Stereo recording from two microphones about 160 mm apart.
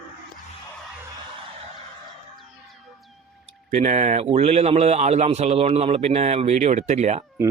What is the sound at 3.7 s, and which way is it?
A man's voice, 50° right (ahead or behind).